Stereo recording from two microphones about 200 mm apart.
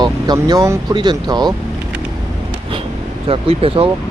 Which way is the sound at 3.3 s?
30° right (ahead or behind).